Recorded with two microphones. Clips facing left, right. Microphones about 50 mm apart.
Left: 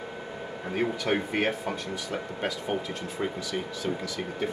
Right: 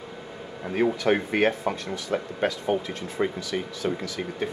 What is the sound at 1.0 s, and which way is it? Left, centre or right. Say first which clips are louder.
Speech: right 4 dB; right.